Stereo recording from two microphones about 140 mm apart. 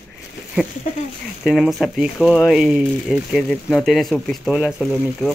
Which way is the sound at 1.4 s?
Centre (ahead or behind).